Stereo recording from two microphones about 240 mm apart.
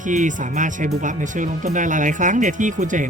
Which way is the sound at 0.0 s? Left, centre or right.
Right.